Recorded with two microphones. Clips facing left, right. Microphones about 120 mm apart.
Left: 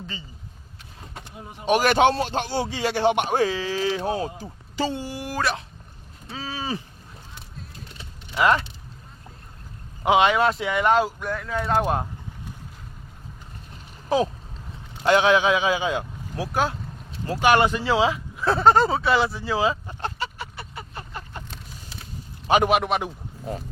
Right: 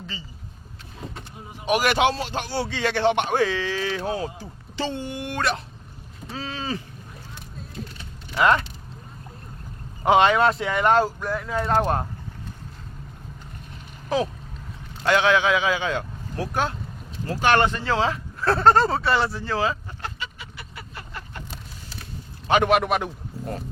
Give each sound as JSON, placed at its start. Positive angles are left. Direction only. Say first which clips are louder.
{"t": 1.6, "sound": "speech", "louder": "left 2 dB", "side_deg": 30}
{"t": 2.4, "sound": "speech", "louder": "left 1 dB", "side_deg": 20}
{"t": 3.3, "sound": "speech", "louder": "even", "side_deg": 40}
{"t": 4.8, "sound": "speech", "louder": "left 1 dB", "side_deg": 10}
{"t": 6.6, "sound": "speech", "louder": "left 1 dB", "side_deg": 15}
{"t": 8.4, "sound": "speech", "louder": "right 1 dB", "side_deg": 20}
{"t": 10.0, "sound": "speech", "louder": "right 1 dB", "side_deg": 5}
{"t": 15.0, "sound": "speech", "louder": "left 2 dB", "side_deg": 15}
{"t": 17.2, "sound": "speech", "louder": "left 1 dB", "side_deg": 15}
{"t": 19.5, "sound": "speech", "louder": "left 2 dB", "side_deg": 15}
{"t": 20.0, "sound": "a sound", "louder": "left 5 dB", "side_deg": 30}
{"t": 22.4, "sound": "a man's voice", "louder": "left 1 dB", "side_deg": 15}
{"t": 22.7, "sound": "speech", "louder": "right 1 dB", "side_deg": 0}